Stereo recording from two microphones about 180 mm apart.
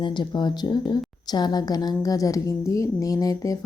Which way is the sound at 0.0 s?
25° left (ahead or behind).